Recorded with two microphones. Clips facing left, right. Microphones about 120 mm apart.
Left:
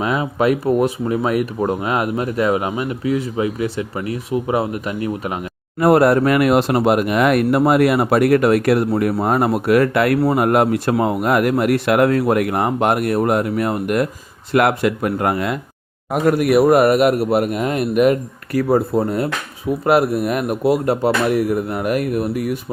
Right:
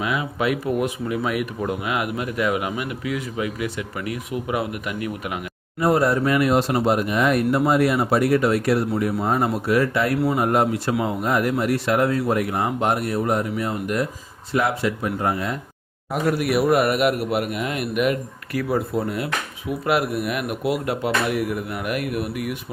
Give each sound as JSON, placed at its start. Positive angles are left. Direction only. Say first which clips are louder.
{"t": 0.0, "sound": "speech", "louder": "left 6 dB", "side_deg": 40}
{"t": 5.8, "sound": "speech", "louder": "left 6 dB", "side_deg": 65}
{"t": 16.1, "sound": "speech", "louder": "left 6 dB", "side_deg": 50}